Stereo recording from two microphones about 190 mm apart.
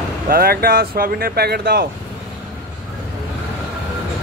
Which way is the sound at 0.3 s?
50° right (ahead or behind).